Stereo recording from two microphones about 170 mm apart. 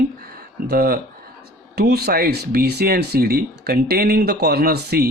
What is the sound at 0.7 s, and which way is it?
Speech, 65° right (ahead or behind).